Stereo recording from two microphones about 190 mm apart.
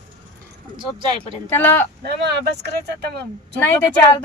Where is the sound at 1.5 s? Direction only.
10° left (ahead or behind).